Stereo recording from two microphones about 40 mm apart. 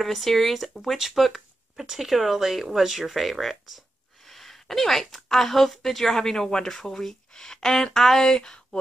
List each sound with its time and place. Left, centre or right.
0.0 s speech: centre